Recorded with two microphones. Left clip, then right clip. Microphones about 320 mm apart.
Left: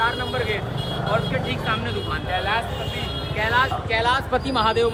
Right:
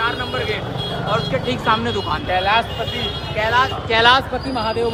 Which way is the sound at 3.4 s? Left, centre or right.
Centre.